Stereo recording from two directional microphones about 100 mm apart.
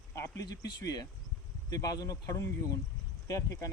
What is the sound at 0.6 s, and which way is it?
Speech, 40° left (ahead or behind).